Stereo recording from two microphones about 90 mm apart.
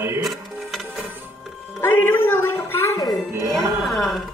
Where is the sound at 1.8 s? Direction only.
25° left (ahead or behind).